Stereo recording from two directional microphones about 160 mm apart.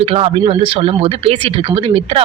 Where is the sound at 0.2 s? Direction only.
35° right (ahead or behind).